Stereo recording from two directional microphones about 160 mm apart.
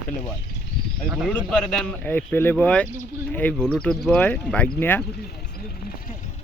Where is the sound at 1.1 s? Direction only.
5° right (ahead or behind).